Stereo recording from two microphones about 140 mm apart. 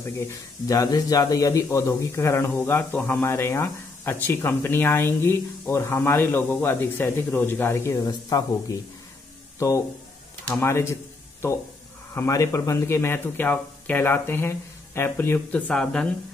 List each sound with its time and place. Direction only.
0.7 s a man's voice: 25° left (ahead or behind)
9.6 s a man's voice: 20° left (ahead or behind)
12.1 s a man's voice: 20° left (ahead or behind); by 16.1 s 5° left (ahead or behind)